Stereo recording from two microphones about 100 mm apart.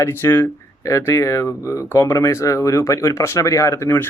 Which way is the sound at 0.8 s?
30° left (ahead or behind).